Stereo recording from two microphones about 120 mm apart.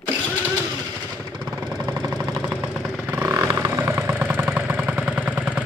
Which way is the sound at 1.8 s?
35° right (ahead or behind).